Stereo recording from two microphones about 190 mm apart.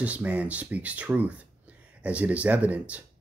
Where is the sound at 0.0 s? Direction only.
5° right (ahead or behind).